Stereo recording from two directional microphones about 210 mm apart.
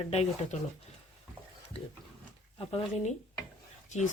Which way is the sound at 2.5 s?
25° left (ahead or behind).